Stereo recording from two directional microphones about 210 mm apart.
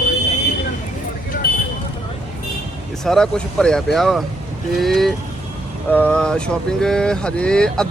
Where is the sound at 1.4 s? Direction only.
45° left (ahead or behind).